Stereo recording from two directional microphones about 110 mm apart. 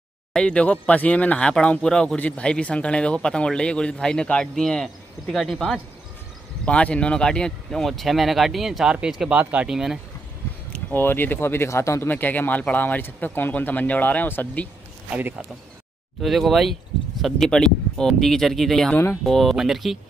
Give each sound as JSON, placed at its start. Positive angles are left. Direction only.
{"t": 0.3, "sound": "speech", "side_deg": 10}
{"t": 10.7, "sound": "speech", "side_deg": 20}
{"t": 15.0, "sound": "speech", "side_deg": -15}
{"t": 16.2, "sound": "speech", "side_deg": 0}